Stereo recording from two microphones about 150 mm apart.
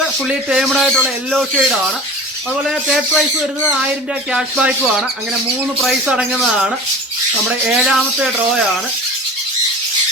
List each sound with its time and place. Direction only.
0.3 s speech: 5° right (ahead or behind)
4.3 s speech: 5° right (ahead or behind)
5.8 s speech: 5° right (ahead or behind)